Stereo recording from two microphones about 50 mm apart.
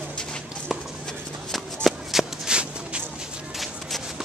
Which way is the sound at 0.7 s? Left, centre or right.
Centre.